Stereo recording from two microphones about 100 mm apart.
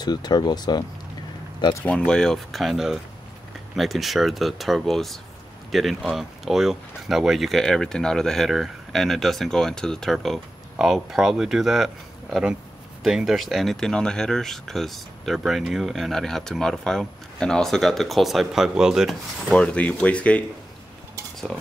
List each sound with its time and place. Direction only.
0.0 s speech: 45° left (ahead or behind)
1.9 s speech: 10° left (ahead or behind)
19.5 s speech: 10° left (ahead or behind)